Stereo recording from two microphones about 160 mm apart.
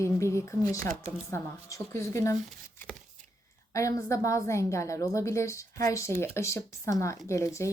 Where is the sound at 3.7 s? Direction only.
20° left (ahead or behind).